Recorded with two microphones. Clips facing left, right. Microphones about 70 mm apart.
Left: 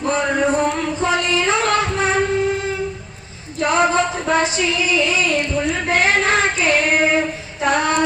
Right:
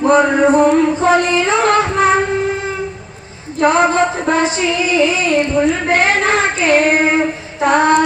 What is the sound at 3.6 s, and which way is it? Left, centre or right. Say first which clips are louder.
Singing: right 4 dB; right.